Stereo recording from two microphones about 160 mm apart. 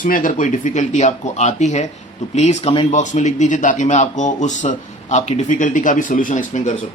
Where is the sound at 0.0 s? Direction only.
60° left (ahead or behind).